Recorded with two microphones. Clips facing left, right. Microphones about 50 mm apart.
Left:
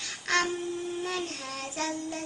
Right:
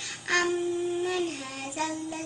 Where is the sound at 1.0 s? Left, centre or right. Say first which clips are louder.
Right 4 dB; centre.